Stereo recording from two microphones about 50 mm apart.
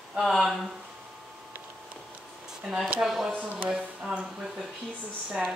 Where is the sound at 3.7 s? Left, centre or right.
Centre.